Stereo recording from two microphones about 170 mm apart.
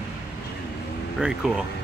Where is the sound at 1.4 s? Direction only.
5° right (ahead or behind).